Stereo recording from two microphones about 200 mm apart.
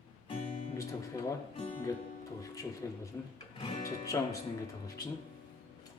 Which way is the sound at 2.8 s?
15° left (ahead or behind).